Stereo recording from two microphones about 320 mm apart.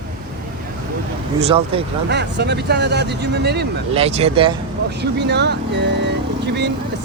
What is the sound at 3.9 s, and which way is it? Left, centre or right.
Speech, centre.